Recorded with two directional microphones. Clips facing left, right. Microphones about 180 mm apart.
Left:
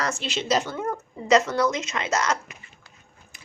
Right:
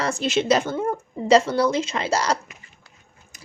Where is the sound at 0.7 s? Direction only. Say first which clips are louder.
Right 4 dB; 30° right (ahead or behind).